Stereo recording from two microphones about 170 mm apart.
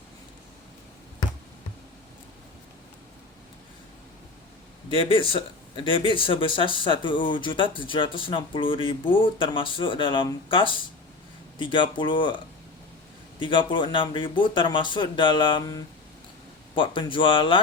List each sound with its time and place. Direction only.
4.9 s speech: 30° left (ahead or behind)
13.4 s speech: 30° left (ahead or behind)